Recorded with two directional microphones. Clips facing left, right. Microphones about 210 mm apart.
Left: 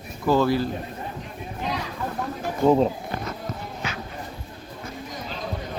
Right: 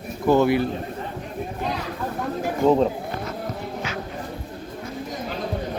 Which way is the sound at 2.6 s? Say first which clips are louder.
Even; centre (ahead or behind).